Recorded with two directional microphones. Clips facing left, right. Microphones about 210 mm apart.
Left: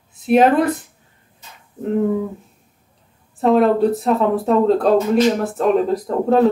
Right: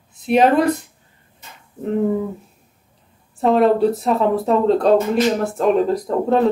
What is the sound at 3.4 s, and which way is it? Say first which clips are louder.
Speech: even; centre (ahead or behind).